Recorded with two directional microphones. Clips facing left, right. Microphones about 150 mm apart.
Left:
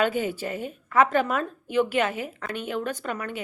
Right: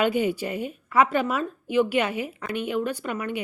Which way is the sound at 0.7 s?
10° right (ahead or behind).